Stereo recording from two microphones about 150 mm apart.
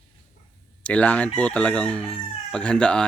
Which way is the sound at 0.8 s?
10° left (ahead or behind).